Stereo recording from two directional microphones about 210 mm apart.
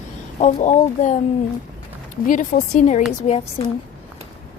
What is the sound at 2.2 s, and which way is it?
Speech, 40° left (ahead or behind).